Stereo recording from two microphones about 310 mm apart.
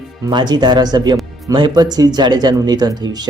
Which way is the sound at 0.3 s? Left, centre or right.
Centre.